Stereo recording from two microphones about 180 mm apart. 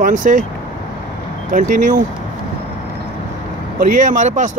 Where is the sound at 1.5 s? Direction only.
45° right (ahead or behind).